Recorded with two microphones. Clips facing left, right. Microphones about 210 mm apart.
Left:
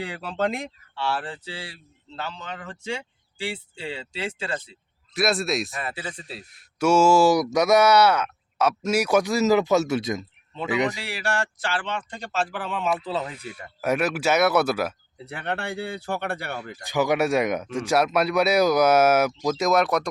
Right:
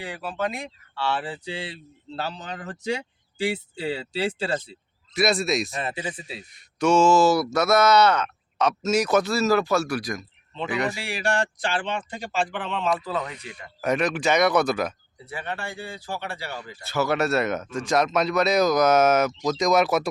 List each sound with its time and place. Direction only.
0.0 s speech: 60° left (ahead or behind)
0.9 s speech: 10° left (ahead or behind)
1.5 s a man's voice: 20° right (ahead or behind)
2.1 s speech: 35° right (ahead or behind)
4.7 s speech: centre (ahead or behind)
5.7 s speech: 20° right (ahead or behind)
6.1 s a man's voice: centre (ahead or behind); by 11.0 s 20° left (ahead or behind)
11.0 s speech: 15° right (ahead or behind); by 13.0 s 5° left (ahead or behind)
13.1 s a man's voice: 30° left (ahead or behind)
13.5 s speech: 5° left (ahead or behind)
15.2 s speech: 65° left (ahead or behind)
16.8 s speech: 15° left (ahead or behind); by 20.1 s 5° right (ahead or behind)